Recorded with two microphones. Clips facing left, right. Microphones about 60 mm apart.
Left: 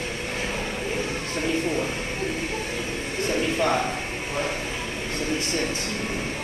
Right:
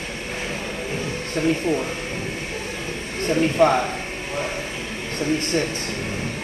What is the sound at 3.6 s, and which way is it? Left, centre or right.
Speech, right.